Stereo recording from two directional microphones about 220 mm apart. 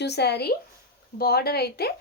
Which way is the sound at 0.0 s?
50° left (ahead or behind).